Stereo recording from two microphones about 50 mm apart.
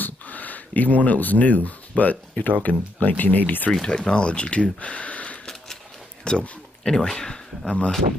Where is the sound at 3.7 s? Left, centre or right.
Centre.